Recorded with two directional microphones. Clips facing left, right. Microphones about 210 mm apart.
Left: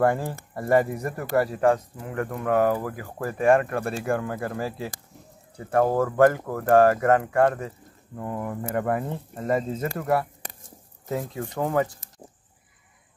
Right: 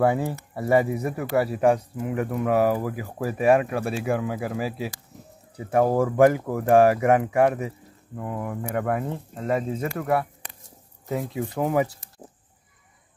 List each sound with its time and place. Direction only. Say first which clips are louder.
0.0 s speech: right 1 dB; 10° right (ahead or behind)
10.4 s a sound: left 3 dB; 40° left (ahead or behind)
11.4 s speech: right 1 dB; 5° right (ahead or behind)